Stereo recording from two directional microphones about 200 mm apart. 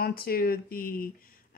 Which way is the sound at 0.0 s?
50° left (ahead or behind).